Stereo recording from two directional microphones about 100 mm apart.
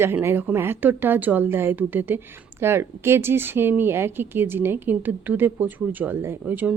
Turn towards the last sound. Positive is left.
turn(degrees=-15)  # may be behind; listen again after turning